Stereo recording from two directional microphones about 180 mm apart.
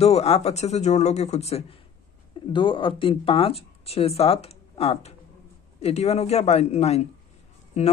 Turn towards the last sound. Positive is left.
turn(degrees=40)  # may be behind; listen again after turning